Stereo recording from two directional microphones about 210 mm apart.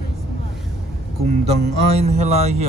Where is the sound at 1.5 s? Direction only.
30° right (ahead or behind).